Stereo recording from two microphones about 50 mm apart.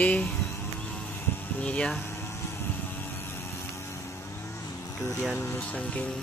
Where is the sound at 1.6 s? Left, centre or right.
Left.